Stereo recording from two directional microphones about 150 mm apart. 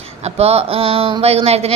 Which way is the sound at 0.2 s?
45° right (ahead or behind).